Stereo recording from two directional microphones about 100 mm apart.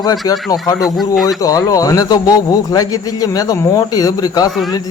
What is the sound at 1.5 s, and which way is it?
Speech, 35° left (ahead or behind).